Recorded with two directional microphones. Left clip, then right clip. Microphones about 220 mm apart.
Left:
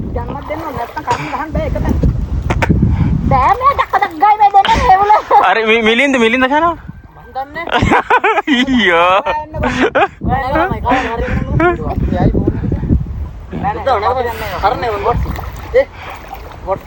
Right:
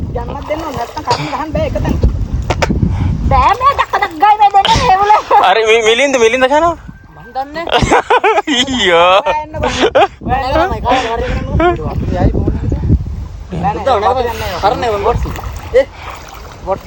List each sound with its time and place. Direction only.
0.3 s speech: 30° right (ahead or behind)
1.5 s speech: 25° right (ahead or behind)
2.5 s a sound: 15° right (ahead or behind)
3.6 s speech: 25° right (ahead or behind)
3.9 s a sound: 15° right (ahead or behind)
7.3 s speech: 30° right (ahead or behind)
10.2 s speech: 25° right (ahead or behind)
13.5 s speech: 25° right (ahead or behind)
14.3 s speech: 15° right (ahead or behind)
14.6 s speech: 30° right (ahead or behind)